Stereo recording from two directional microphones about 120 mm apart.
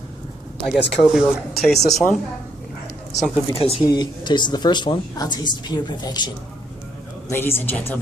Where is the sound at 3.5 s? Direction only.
55° left (ahead or behind).